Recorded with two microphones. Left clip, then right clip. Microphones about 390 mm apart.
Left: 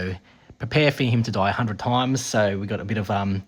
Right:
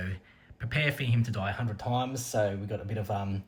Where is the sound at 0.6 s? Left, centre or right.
Centre.